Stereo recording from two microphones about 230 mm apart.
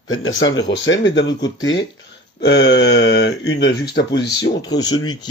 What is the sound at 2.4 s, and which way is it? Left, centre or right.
Speech, left.